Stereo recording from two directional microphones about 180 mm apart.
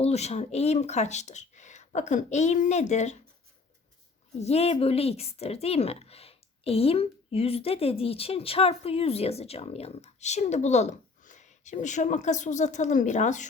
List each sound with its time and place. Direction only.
0.0 s speech: 35° left (ahead or behind)
4.4 s speech: 35° left (ahead or behind)